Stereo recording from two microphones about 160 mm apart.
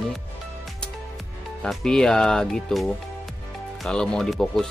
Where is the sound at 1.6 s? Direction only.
5° left (ahead or behind).